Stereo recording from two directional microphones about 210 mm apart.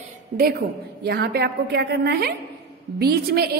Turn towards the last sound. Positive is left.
turn(degrees=-45)  # may be behind; listen again after turning